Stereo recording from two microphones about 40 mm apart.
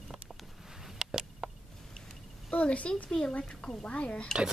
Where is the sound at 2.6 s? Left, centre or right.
Left.